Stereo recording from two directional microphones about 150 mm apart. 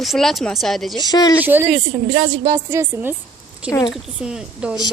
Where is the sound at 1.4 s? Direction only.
15° right (ahead or behind).